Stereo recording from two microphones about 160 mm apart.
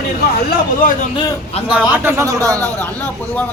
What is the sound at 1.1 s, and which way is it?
Speech, 30° left (ahead or behind).